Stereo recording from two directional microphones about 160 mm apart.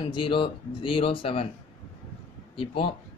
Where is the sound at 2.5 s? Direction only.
35° left (ahead or behind).